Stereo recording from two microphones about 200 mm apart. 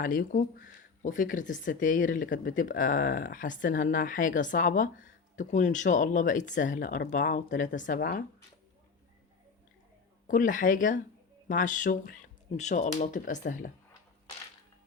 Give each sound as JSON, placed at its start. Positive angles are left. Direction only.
{"t": 0.0, "sound": "speech", "side_deg": 45}
{"t": 10.2, "sound": "speech", "side_deg": 40}